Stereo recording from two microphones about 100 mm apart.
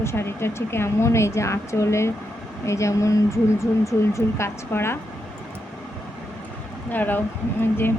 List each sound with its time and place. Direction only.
0.0 s speech: 25° left (ahead or behind)
6.9 s speech: 20° left (ahead or behind)